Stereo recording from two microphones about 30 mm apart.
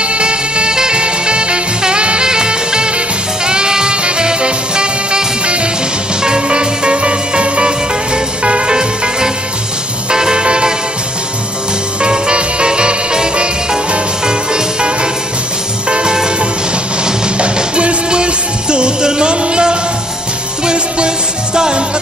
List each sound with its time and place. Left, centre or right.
0.0 s music: right
12.0 s music: right
17.4 s music: right